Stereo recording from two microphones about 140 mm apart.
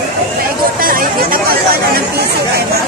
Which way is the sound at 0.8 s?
90° right.